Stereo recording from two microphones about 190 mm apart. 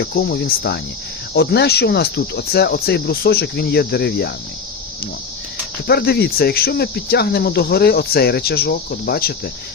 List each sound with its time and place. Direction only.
0.0 s speech: 55° left (ahead or behind)
5.9 s speech: 55° left (ahead or behind)